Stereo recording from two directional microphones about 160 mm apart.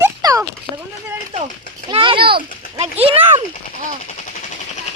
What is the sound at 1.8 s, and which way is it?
A child's voice, 30° right (ahead or behind).